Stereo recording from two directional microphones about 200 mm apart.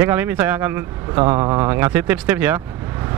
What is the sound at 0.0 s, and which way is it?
Speech, 10° right (ahead or behind).